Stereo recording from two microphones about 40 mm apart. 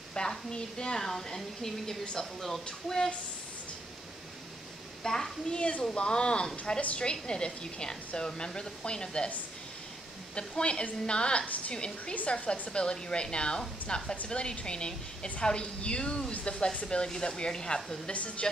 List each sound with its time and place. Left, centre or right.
0.2 s a woman's voice: centre
5.0 s a woman's voice: centre
5.5 s speech: left
10.3 s speech: left
11.4 s a woman's voice: left
11.7 s speech: left
18.1 s a woman's voice: left